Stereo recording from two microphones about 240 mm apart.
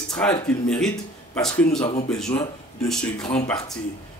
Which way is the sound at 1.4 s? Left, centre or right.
Centre.